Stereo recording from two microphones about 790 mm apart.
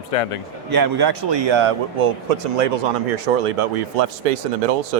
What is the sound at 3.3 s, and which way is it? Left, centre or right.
Speech, right.